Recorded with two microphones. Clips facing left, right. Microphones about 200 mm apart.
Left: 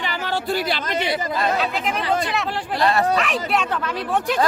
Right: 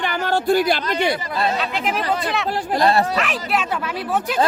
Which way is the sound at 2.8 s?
35° right (ahead or behind).